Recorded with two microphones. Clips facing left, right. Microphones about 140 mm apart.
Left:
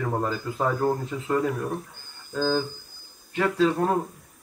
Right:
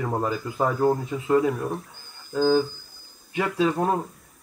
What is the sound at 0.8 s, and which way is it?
A man's voice, 15° right (ahead or behind).